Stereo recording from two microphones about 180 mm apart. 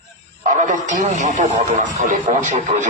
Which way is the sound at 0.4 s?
45° right (ahead or behind).